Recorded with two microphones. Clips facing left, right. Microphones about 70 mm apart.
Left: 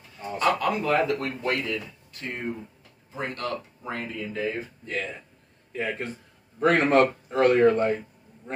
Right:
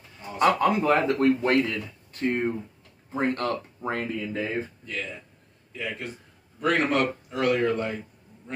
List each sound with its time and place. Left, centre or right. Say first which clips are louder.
0.4 s a man's voice: right 3 dB; right
5.7 s a man's voice: left 4 dB; left